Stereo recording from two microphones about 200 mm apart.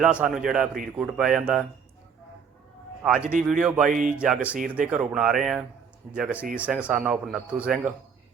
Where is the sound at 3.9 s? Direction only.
40° right (ahead or behind).